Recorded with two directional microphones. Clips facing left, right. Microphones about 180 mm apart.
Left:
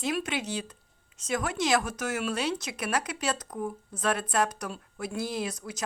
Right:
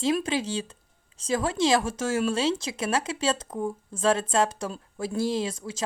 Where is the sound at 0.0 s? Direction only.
30° right (ahead or behind).